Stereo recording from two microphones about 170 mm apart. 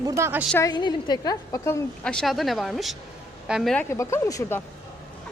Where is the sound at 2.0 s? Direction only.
5° left (ahead or behind).